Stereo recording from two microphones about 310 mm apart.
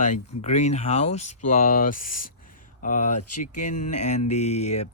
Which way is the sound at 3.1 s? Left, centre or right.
Left.